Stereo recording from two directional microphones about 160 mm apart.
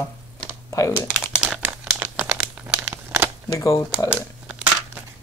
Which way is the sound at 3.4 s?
20° left (ahead or behind).